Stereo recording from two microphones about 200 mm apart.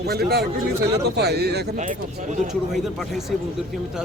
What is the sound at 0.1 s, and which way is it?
Speech, 50° right (ahead or behind).